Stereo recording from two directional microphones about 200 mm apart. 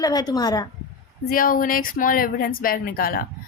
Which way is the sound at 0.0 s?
20° left (ahead or behind).